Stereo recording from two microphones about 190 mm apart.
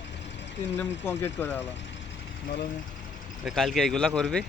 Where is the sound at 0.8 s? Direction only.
10° left (ahead or behind).